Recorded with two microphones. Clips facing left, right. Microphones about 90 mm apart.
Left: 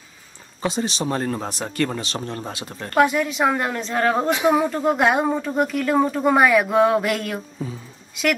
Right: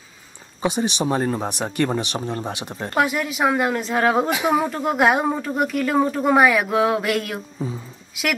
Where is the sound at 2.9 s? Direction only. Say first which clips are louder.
Left 3 dB; 5° right (ahead or behind).